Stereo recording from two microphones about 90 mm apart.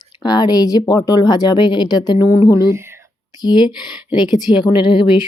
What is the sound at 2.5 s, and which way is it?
Speech, 30° right (ahead or behind).